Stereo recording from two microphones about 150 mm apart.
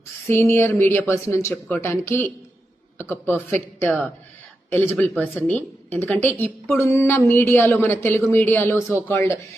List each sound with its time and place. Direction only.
0.3 s a man's voice: 15° left (ahead or behind)